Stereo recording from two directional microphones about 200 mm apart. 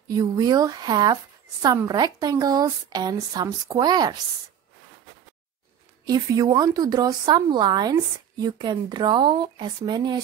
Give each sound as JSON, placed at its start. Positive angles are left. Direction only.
{"t": 0.1, "sound": "speech", "side_deg": -20}
{"t": 6.0, "sound": "speech", "side_deg": -20}